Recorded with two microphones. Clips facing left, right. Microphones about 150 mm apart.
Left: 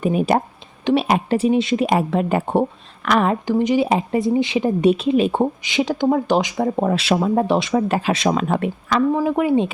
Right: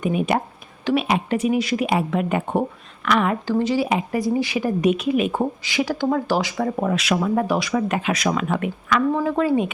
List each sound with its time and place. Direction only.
0.0 s a woman's voice: 35° left (ahead or behind)
1.9 s a woman's voice: 35° left (ahead or behind)
3.4 s speech: 15° left (ahead or behind)
3.8 s speech: 30° left (ahead or behind)
6.8 s speech: 30° left (ahead or behind)
9.1 s speech: 15° left (ahead or behind)